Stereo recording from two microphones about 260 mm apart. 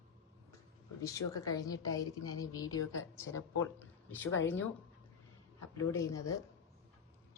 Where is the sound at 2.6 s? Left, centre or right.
Left.